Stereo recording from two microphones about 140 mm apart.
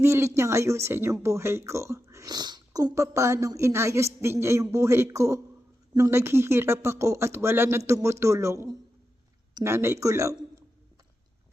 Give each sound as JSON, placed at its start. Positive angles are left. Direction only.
{"t": 0.0, "sound": "speech", "side_deg": -20}